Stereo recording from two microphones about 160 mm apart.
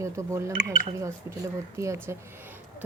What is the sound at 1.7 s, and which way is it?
Speech, 20° right (ahead or behind).